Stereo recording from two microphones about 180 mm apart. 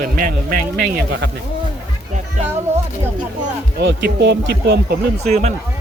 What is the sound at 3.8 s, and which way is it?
Speech, 70° right (ahead or behind).